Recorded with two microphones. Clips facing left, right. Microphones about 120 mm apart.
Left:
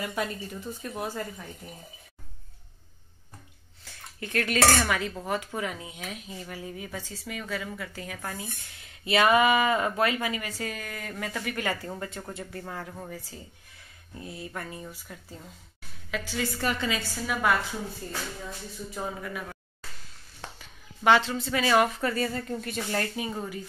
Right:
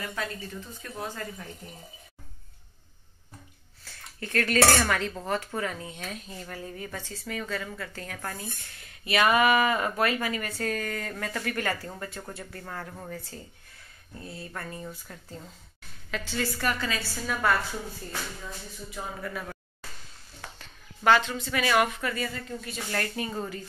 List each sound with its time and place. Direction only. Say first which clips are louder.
0.0 s speech: left 3 dB; 15° left (ahead or behind)
3.8 s speech: even; 15° left (ahead or behind)
9.0 s speech: left 1 dB; 25° left (ahead or behind)
19.2 s speech: right 1 dB; 10° left (ahead or behind)
20.5 s a sound: even; 10° left (ahead or behind)
21.1 s a woman's voice: left 1 dB; 30° left (ahead or behind)
22.8 s speech: even; 25° left (ahead or behind)
23.2 s speech: even; 10° left (ahead or behind)